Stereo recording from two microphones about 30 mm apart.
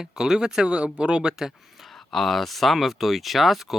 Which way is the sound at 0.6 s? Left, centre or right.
Right.